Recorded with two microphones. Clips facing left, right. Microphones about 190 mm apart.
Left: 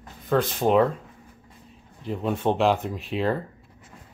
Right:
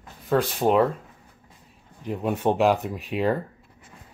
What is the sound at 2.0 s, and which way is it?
Speech, 10° right (ahead or behind).